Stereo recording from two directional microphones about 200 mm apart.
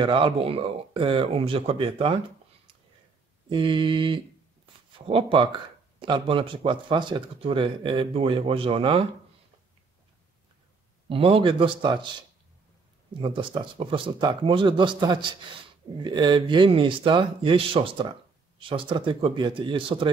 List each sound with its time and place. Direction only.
0.0 s speech: 25° right (ahead or behind)
3.4 s speech: 25° right (ahead or behind)
11.1 s speech: 30° right (ahead or behind)
13.2 s speech: 25° right (ahead or behind)